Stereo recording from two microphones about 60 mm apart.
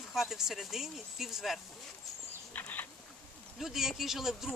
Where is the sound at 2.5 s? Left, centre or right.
Left.